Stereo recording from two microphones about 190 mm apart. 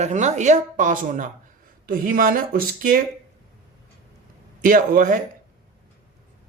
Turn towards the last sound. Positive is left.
turn(degrees=-45)  # may be behind; listen again after turning